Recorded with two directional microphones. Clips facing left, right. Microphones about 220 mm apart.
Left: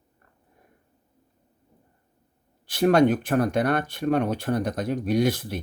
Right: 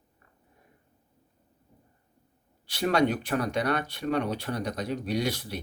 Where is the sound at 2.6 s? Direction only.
50° left (ahead or behind).